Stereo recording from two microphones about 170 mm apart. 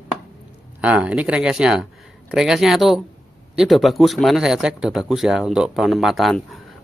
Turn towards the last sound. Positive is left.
turn(degrees=0)  # may be behind; listen again after turning